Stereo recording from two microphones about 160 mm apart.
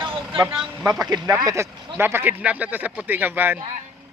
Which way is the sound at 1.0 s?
25° right (ahead or behind).